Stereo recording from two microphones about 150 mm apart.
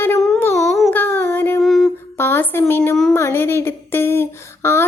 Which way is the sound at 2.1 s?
15° left (ahead or behind).